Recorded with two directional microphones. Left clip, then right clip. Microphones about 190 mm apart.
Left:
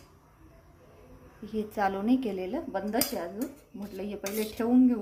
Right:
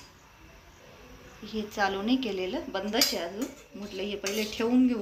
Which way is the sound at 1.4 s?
55° left (ahead or behind).